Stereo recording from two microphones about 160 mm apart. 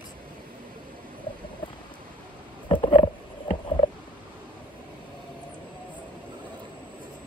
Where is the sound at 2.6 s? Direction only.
30° left (ahead or behind).